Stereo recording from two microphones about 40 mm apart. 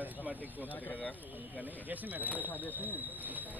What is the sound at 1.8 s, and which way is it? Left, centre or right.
Speech, right.